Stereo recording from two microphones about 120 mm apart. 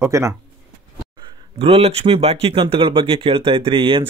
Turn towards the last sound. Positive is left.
turn(degrees=-45)  # may be behind; listen again after turning